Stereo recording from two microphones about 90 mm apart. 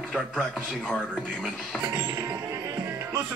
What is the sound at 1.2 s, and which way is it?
Speech, 10° right (ahead or behind).